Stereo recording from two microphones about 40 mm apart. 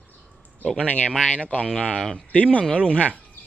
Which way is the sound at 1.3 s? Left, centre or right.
Left.